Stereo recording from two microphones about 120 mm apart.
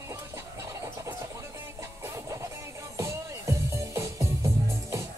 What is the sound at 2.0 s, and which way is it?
Music, 25° right (ahead or behind).